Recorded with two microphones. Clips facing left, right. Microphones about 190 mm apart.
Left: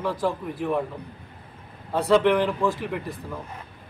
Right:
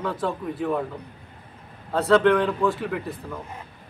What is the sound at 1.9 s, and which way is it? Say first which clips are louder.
Speech: right 1 dB; 10° left (ahead or behind).